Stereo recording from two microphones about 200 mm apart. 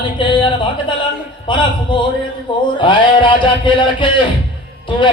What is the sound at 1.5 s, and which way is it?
Music, 25° left (ahead or behind).